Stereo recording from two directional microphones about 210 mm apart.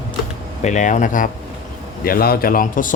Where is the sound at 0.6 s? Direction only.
35° left (ahead or behind).